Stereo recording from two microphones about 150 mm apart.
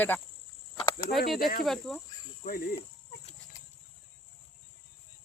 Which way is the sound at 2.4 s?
80° left.